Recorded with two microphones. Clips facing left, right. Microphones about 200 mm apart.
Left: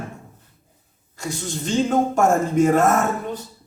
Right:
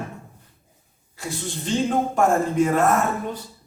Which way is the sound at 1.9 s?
45° left (ahead or behind).